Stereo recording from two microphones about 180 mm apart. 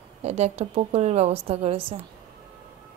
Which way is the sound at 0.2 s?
35° right (ahead or behind).